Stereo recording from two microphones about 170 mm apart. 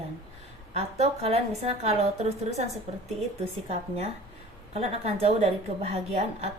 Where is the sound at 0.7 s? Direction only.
40° right (ahead or behind).